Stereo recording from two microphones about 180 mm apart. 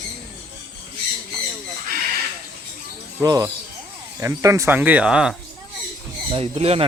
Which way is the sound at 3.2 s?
20° right (ahead or behind).